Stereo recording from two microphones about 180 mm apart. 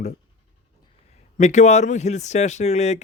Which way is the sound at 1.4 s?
40° left (ahead or behind).